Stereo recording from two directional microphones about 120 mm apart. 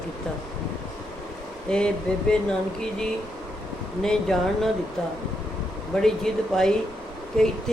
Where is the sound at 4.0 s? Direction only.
5° left (ahead or behind).